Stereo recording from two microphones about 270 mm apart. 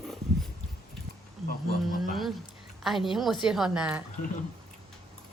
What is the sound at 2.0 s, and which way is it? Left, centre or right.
A woman's voice, centre.